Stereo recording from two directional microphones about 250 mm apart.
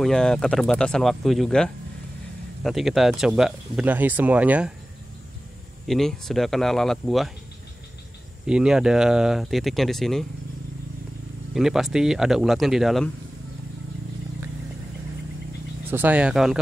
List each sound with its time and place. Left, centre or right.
0.0 s speech: centre
5.9 s speech: centre
8.5 s speech: centre
11.5 s speech: centre
15.9 s speech: centre